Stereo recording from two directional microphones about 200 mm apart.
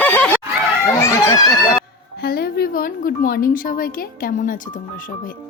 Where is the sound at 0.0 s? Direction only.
10° left (ahead or behind).